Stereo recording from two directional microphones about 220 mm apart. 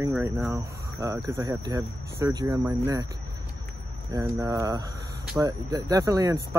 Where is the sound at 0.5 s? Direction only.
15° right (ahead or behind).